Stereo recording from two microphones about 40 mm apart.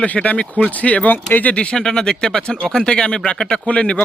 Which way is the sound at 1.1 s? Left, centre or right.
Left.